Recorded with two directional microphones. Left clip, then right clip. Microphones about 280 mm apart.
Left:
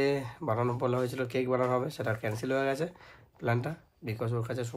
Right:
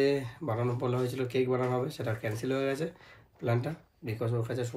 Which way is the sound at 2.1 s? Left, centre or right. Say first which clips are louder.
Left 1 dB; centre.